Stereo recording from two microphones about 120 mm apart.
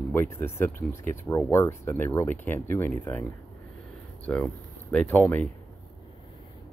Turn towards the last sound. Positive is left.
turn(degrees=15)  # may be behind; listen again after turning